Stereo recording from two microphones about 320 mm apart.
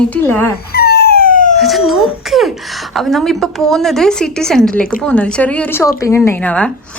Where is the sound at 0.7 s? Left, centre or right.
Left.